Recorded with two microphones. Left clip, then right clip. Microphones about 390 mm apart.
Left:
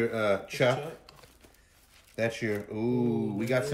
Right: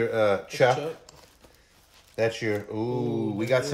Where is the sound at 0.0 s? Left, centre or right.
Centre.